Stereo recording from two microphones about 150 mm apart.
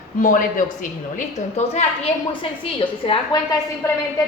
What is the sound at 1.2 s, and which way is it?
Speech, 50° left (ahead or behind).